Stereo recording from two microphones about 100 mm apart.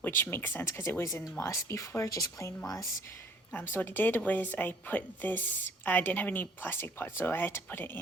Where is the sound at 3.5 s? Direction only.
20° left (ahead or behind).